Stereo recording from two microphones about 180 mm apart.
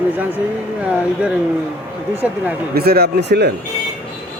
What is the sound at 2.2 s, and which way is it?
Speech, 5° right (ahead or behind).